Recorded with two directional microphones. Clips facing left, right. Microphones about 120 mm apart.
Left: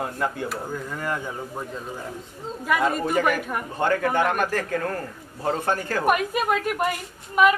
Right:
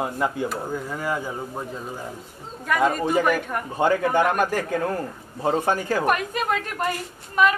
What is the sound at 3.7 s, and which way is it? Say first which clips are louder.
Speech: right 2 dB; 10° right (ahead or behind).